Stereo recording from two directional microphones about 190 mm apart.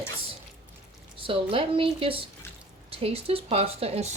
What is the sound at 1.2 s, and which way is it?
Speech, 30° right (ahead or behind).